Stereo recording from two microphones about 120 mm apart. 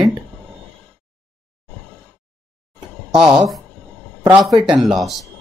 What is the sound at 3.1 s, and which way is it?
Speech, 5° right (ahead or behind).